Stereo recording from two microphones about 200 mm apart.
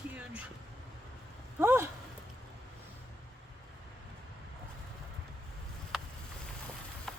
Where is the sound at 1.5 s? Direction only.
10° right (ahead or behind).